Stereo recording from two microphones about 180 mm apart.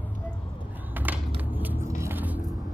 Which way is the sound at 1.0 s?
10° right (ahead or behind).